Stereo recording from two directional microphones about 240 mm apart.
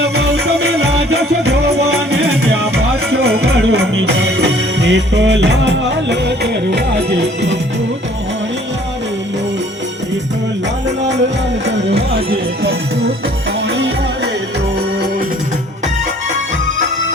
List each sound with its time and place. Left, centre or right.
0.0 s music: right
3.1 s music: right
11.6 s music: right